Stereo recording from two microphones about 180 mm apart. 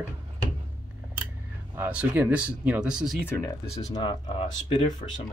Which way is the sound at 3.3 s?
20° left (ahead or behind).